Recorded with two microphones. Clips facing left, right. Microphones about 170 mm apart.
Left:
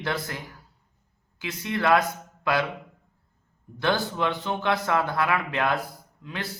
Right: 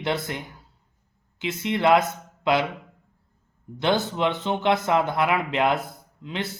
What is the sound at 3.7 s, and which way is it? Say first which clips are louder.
Speech: right 2 dB; 20° right (ahead or behind).